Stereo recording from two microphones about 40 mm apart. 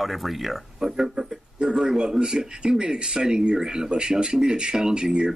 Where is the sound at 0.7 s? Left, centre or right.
Centre.